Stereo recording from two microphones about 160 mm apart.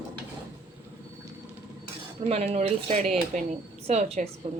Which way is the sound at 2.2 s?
40° right (ahead or behind).